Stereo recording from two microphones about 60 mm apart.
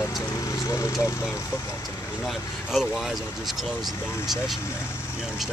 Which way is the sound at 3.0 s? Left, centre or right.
Centre.